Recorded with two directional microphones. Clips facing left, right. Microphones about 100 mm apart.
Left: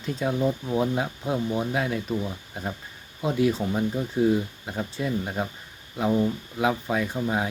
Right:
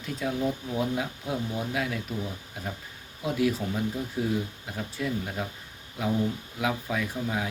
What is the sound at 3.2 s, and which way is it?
Speech, 30° left (ahead or behind).